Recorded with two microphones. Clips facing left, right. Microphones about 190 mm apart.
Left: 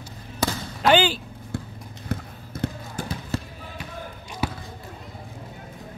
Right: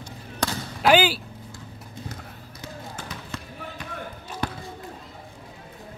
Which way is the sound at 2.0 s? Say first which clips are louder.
Left 7 dB; 60° left (ahead or behind).